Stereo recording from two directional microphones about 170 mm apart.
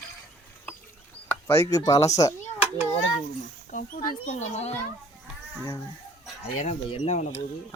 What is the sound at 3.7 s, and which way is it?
Speech, 40° left (ahead or behind).